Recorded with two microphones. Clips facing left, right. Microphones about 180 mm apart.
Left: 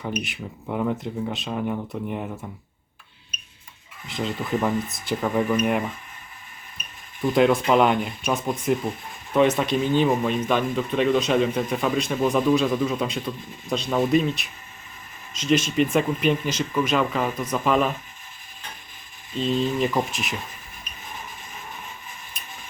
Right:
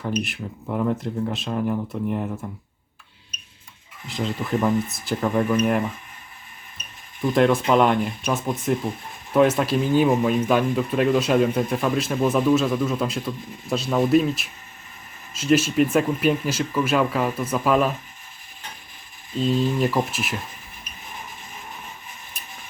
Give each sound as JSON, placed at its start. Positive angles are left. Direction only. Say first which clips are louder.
{"t": 0.0, "sound": "speech", "louder": "right 3 dB", "side_deg": 5}
{"t": 4.0, "sound": "speech", "louder": "right 1 dB", "side_deg": 0}
{"t": 7.3, "sound": "speech", "louder": "even", "side_deg": 0}
{"t": 19.4, "sound": "speech", "louder": "right 2 dB", "side_deg": -5}